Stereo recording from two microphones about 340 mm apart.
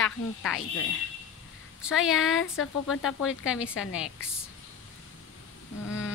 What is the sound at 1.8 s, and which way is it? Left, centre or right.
Speech, centre.